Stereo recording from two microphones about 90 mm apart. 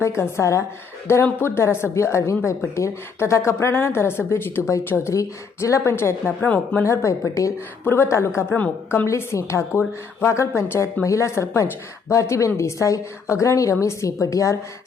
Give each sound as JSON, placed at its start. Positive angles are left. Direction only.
{"t": 0.2, "sound": "a woman's voice", "side_deg": 30}
{"t": 5.1, "sound": "a woman's voice", "side_deg": 35}
{"t": 6.8, "sound": "a woman's voice", "side_deg": 35}